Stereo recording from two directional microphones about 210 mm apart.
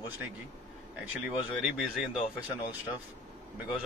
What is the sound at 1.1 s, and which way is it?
Speech, 5° right (ahead or behind).